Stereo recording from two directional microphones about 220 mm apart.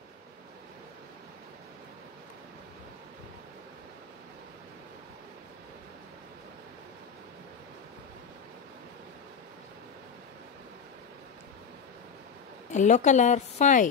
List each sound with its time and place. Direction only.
12.7 s a woman's voice: 35° left (ahead or behind)